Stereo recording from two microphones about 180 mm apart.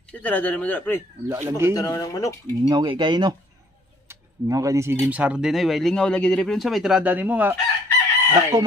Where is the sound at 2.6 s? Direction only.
25° right (ahead or behind).